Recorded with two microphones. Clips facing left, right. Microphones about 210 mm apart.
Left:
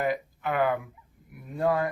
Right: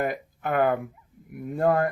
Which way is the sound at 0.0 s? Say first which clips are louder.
Even; 50° right (ahead or behind).